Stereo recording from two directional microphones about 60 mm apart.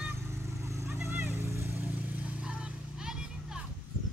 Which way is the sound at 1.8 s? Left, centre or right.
Right.